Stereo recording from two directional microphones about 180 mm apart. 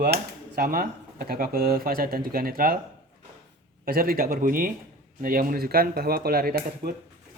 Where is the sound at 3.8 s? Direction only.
55° right (ahead or behind).